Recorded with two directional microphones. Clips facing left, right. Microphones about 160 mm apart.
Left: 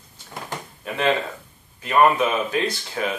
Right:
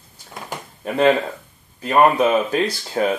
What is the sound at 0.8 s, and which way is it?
Speech, 35° right (ahead or behind).